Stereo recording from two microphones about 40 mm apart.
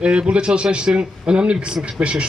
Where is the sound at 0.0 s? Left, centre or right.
Right.